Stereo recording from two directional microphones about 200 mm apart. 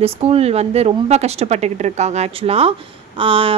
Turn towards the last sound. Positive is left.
turn(degrees=-25)  # may be behind; listen again after turning